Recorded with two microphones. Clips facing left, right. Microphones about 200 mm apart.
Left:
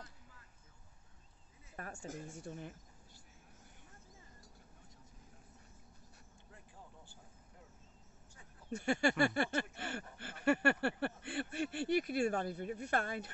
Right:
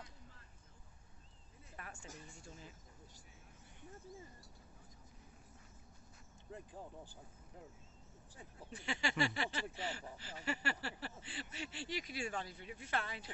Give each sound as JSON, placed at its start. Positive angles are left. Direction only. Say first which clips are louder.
{"t": 1.8, "sound": "a sound", "louder": "left 8 dB", "side_deg": 45}
{"t": 2.2, "sound": "speech", "louder": "left 9 dB", "side_deg": 60}
{"t": 8.6, "sound": "speech", "louder": "left 9 dB", "side_deg": 50}